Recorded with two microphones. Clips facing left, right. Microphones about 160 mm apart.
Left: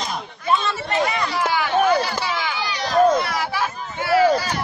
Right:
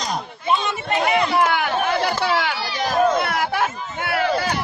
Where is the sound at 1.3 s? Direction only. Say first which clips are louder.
Right 1 dB; 60° right (ahead or behind).